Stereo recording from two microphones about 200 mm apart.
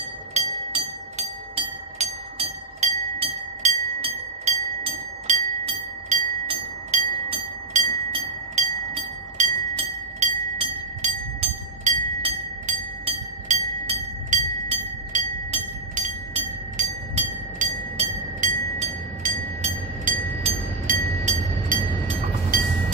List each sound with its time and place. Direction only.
0.3 s train: 35° right (ahead or behind)
5.3 s a sound: 35° right (ahead or behind)
6.0 s train: 30° right (ahead or behind)
9.4 s bell: 30° right (ahead or behind)
12.6 s music: 35° right (ahead or behind)
15.1 s train: 35° right (ahead or behind)
20.9 s a sound: 45° right (ahead or behind)
22.5 s vehicle: 45° right (ahead or behind)